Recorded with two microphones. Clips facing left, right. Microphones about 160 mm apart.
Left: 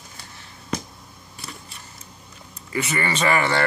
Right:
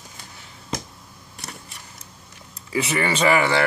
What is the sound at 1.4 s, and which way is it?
Camera, 75° right (ahead or behind).